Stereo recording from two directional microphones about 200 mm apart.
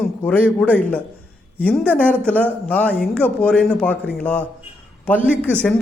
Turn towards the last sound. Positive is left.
turn(degrees=5)  # may be behind; listen again after turning